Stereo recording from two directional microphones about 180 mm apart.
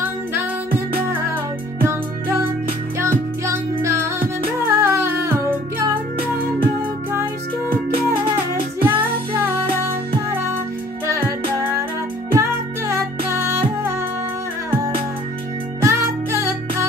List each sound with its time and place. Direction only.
0.0 s music: 10° right (ahead or behind)
8.8 s music: 10° right (ahead or behind)
15.8 s music: 15° right (ahead or behind)